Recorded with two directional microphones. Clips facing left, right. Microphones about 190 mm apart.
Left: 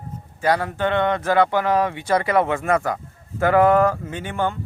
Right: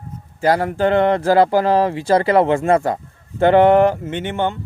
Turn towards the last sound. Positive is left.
turn(degrees=-25)  # may be behind; listen again after turning